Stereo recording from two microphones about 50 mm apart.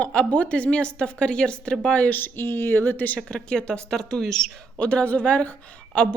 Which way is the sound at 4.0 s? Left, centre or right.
Centre.